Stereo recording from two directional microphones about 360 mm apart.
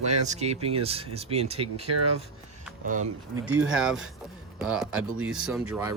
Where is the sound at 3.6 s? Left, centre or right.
Centre.